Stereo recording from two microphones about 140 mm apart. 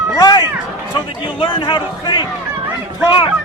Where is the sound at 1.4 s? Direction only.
35° left (ahead or behind).